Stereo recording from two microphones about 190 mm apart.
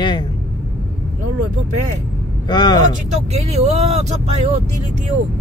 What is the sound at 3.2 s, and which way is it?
Speech, 35° right (ahead or behind).